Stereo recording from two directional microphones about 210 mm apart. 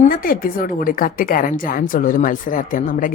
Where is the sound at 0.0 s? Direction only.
40° left (ahead or behind).